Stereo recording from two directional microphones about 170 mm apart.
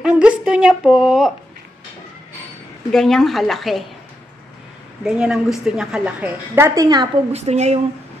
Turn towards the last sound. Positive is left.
turn(degrees=-40)  # may be behind; listen again after turning